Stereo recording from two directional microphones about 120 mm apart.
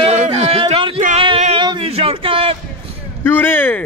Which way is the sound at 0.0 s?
55° right (ahead or behind).